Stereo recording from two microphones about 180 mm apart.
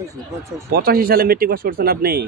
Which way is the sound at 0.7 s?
55° right (ahead or behind).